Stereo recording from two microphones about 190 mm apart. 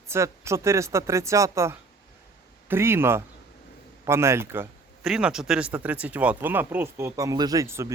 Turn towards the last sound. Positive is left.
turn(degrees=-15)  # may be behind; listen again after turning